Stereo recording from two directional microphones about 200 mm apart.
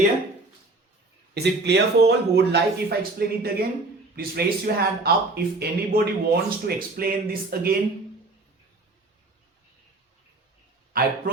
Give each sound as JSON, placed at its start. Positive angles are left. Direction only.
{"t": 1.3, "sound": "speech", "side_deg": -55}
{"t": 10.9, "sound": "a man's voice", "side_deg": -45}